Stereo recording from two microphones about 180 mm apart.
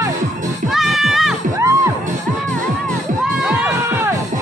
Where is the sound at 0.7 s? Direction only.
Centre (ahead or behind).